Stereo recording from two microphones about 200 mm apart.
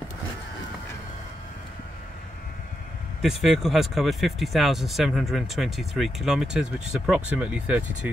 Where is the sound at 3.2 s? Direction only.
Centre (ahead or behind).